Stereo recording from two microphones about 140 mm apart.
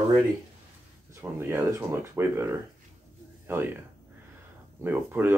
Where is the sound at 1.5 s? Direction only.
15° right (ahead or behind).